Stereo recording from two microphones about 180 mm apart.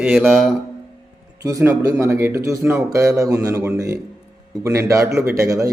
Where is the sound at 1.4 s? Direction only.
15° right (ahead or behind).